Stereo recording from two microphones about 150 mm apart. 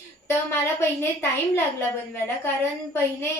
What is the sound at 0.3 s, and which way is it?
Speech, 15° left (ahead or behind).